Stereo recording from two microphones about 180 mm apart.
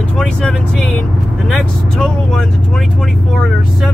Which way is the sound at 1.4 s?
Centre (ahead or behind).